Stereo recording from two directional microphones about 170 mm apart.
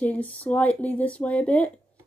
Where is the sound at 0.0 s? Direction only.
10° left (ahead or behind).